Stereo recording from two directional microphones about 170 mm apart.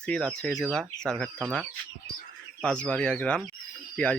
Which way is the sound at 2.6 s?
5° left (ahead or behind).